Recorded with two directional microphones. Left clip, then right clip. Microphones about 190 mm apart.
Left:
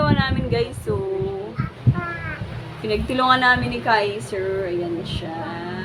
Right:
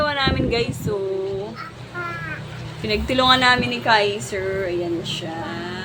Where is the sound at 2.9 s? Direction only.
15° right (ahead or behind).